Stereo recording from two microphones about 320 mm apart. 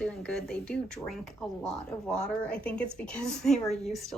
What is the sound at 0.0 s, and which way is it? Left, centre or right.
Speech, centre.